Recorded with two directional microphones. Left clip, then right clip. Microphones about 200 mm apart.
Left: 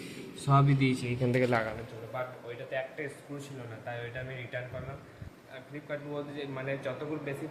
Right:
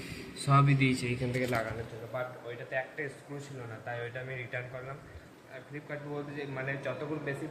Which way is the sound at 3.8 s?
5° left (ahead or behind).